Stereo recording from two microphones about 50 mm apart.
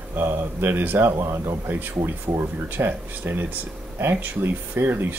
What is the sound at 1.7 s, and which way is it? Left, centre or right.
Speech, right.